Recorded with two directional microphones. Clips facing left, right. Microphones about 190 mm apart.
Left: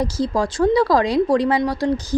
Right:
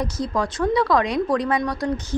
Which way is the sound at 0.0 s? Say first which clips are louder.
Left 4 dB; 30° left (ahead or behind).